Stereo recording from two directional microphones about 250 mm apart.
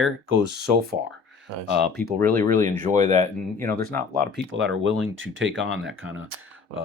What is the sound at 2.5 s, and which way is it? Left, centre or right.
Speech, right.